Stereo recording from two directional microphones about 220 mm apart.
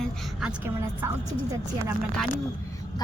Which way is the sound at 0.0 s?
Centre (ahead or behind).